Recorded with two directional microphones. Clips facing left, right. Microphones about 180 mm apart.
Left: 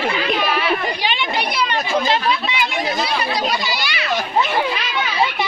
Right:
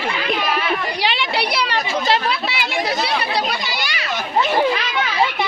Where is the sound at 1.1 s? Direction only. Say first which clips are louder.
Right 3 dB; 85° right.